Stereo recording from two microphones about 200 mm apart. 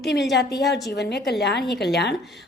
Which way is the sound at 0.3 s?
55° left (ahead or behind).